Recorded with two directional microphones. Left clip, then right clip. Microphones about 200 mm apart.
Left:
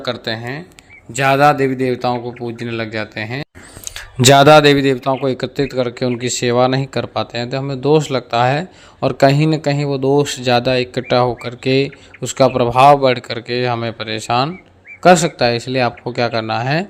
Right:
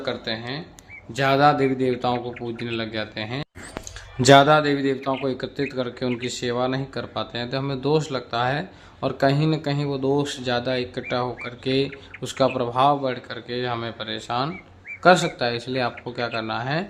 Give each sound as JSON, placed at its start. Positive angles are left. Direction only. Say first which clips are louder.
{"t": 0.0, "sound": "speech", "louder": "left 6 dB", "side_deg": 40}
{"t": 1.1, "sound": "speech", "louder": "left 6 dB", "side_deg": 20}
{"t": 2.1, "sound": "speech", "louder": "left 5 dB", "side_deg": 0}
{"t": 2.6, "sound": "speech", "louder": "left 6 dB", "side_deg": 20}
{"t": 4.2, "sound": "a man's voice", "louder": "left 7 dB", "side_deg": 45}